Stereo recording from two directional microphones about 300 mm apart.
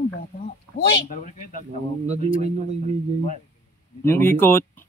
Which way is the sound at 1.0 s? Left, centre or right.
Left.